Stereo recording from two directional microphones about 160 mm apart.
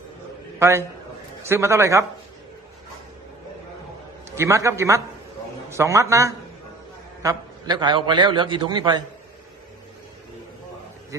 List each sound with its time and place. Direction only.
0.6 s a man's voice: 15° right (ahead or behind)
4.3 s a man's voice: 20° right (ahead or behind)